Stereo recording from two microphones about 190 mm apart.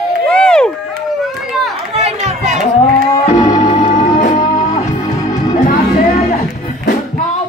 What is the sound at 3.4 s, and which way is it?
Music, 35° left (ahead or behind).